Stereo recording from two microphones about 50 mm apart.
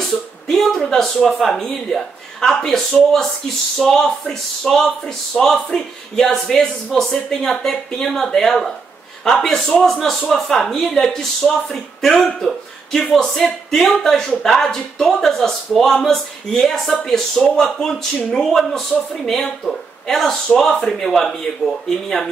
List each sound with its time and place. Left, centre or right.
0.5 s speech: centre
18.4 s speech: centre